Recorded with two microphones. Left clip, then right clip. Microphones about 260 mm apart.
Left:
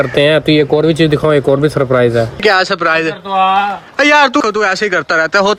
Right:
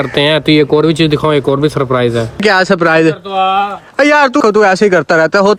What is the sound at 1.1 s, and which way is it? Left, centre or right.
Speech, centre.